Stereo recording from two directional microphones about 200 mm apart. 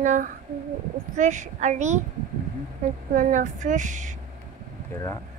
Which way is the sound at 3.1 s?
40° right (ahead or behind).